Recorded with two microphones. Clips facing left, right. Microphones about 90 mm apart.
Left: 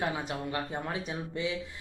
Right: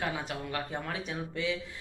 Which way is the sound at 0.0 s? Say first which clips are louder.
Left 2 dB; 20° left (ahead or behind).